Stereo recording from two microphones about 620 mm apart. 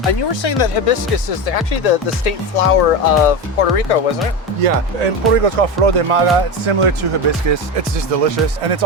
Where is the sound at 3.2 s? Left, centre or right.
Left.